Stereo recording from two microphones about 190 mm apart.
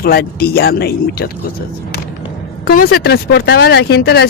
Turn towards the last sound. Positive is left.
turn(degrees=60)  # may be behind; listen again after turning